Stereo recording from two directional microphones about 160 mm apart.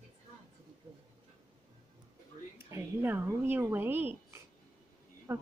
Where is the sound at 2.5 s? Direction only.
15° right (ahead or behind).